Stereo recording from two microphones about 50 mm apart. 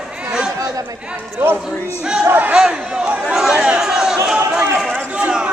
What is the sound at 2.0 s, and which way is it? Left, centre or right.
A man's voice, centre.